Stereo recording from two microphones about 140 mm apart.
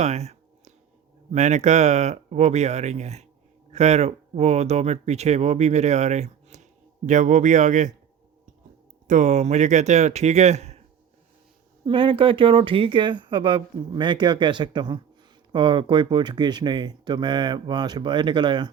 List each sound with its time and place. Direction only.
0.0 s a sound: 50° right (ahead or behind)
1.3 s speech: 55° right (ahead or behind)
9.0 s speech: 60° right (ahead or behind)
11.9 s speech: 40° right (ahead or behind)